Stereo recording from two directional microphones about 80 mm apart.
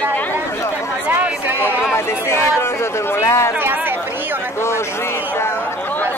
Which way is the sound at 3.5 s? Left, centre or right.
Right.